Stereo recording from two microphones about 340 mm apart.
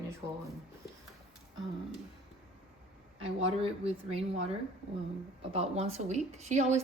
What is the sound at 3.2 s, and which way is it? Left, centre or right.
A woman's voice, centre.